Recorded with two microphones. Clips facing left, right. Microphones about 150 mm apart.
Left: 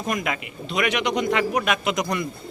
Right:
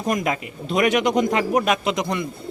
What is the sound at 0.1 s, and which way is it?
A man's voice, 35° right (ahead or behind).